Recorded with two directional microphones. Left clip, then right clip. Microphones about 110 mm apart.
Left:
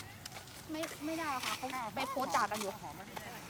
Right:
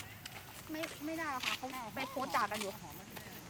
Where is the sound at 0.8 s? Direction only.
15° left (ahead or behind).